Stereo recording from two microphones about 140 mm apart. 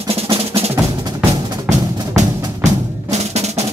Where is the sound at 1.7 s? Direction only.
55° right (ahead or behind).